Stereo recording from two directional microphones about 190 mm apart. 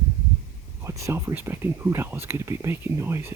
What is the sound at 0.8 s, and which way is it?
Speech, 15° right (ahead or behind).